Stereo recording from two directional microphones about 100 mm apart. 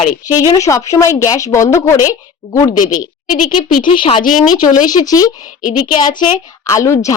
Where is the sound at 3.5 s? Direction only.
55° left (ahead or behind).